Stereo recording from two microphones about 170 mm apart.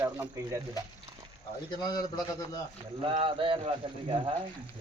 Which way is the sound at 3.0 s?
30° right (ahead or behind).